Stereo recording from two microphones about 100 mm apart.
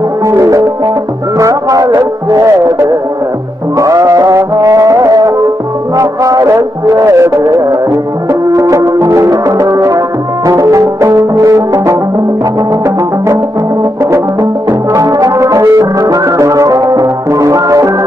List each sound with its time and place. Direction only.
0.3 s music: 30° right (ahead or behind)
14.1 s music: 30° right (ahead or behind)